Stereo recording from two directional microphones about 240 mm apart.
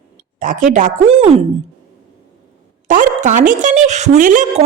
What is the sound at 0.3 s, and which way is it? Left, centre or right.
A woman's voice, right.